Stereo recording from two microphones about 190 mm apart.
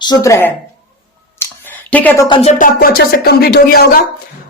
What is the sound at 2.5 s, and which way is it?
Speech, 50° left (ahead or behind).